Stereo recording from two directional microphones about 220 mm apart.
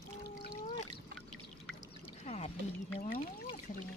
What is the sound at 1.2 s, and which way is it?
Pour, 5° left (ahead or behind).